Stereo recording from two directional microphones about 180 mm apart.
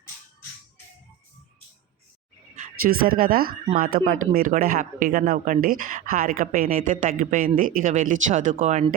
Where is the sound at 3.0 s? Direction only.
55° right (ahead or behind).